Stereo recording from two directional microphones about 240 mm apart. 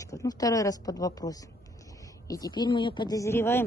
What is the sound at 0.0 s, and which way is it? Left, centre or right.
Speech, centre.